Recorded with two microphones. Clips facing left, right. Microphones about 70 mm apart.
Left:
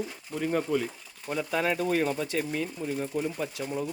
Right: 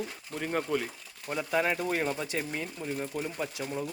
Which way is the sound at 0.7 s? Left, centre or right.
Right.